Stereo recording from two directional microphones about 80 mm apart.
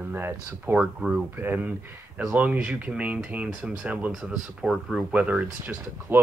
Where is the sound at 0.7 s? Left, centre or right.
Centre.